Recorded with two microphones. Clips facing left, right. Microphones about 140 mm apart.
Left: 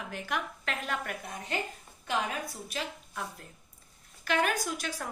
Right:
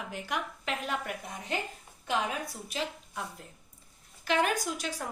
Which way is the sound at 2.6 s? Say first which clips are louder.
Right 2 dB; 20° right (ahead or behind).